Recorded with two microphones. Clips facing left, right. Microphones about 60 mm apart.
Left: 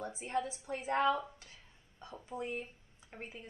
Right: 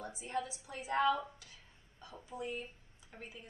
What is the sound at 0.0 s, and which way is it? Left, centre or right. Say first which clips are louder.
A woman's voice: left 3 dB; left.